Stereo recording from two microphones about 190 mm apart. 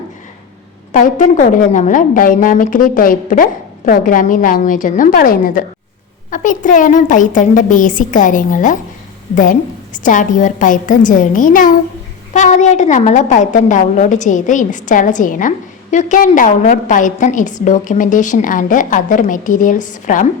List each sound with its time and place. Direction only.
0.9 s a woman's voice: 40° left (ahead or behind)